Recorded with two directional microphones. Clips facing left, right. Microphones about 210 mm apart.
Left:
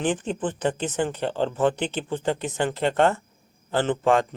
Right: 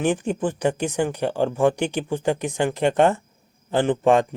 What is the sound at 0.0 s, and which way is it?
Speech, 10° right (ahead or behind).